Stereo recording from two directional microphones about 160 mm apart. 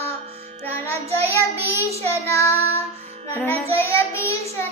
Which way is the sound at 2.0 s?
15° left (ahead or behind).